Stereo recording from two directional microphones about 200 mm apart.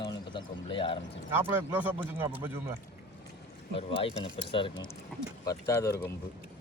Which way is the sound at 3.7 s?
25° left (ahead or behind).